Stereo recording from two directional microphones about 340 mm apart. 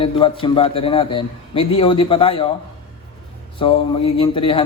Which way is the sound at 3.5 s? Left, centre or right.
Centre.